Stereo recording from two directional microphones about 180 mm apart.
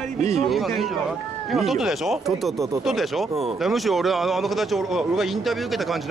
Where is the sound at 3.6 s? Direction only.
Centre (ahead or behind).